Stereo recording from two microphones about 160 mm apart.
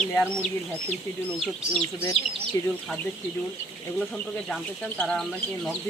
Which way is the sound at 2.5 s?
20° left (ahead or behind).